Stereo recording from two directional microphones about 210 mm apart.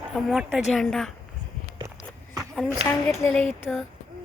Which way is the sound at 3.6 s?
Centre (ahead or behind).